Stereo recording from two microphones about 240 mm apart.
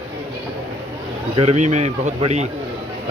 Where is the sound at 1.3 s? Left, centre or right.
Right.